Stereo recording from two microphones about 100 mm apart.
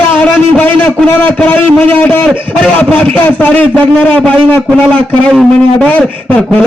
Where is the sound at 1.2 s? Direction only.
20° left (ahead or behind).